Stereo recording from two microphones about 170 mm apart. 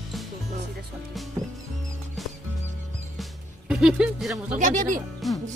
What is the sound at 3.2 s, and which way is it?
Music, 5° right (ahead or behind).